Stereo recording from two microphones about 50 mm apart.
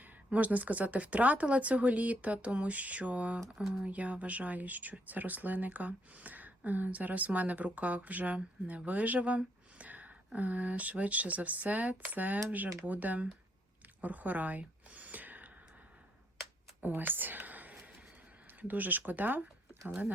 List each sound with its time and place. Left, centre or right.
0.0 s speech: right
3.5 s speech: centre
3.8 s speech: right
14.0 s a sound: right
16.8 s whispering: right
18.7 s speech: right